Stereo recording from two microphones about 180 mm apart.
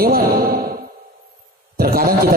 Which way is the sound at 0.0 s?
60° right (ahead or behind).